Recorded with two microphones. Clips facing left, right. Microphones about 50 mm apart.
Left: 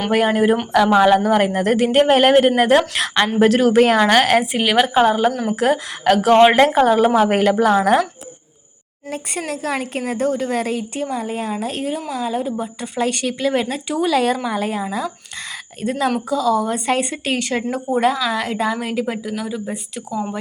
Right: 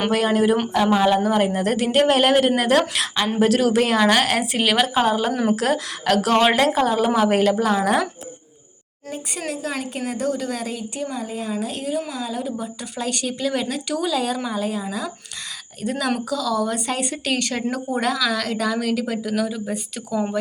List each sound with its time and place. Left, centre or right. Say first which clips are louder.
0.1 s a woman's voice: left 5 dB; left
0.9 s speech: left 5 dB; left
1.2 s a woman's voice: left 3 dB; left
4.5 s a woman's voice: left 4 dB; left
5.3 s speech: right 2 dB; centre
5.5 s a woman's voice: left 4 dB; left
9.0 s a woman's voice: left 3 dB; left
14.0 s a woman's voice: left 7 dB; left
15.8 s a woman's voice: left 3 dB; left
17.3 s a woman's voice: left 3 dB; centre
19.3 s speech: right 1 dB; centre